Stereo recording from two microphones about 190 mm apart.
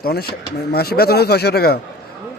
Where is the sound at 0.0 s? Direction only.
55° left (ahead or behind).